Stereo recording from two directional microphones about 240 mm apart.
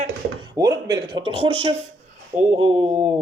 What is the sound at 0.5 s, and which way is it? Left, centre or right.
Speech, centre.